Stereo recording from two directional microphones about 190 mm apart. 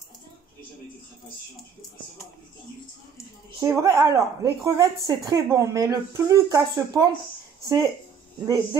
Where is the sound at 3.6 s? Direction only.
15° right (ahead or behind).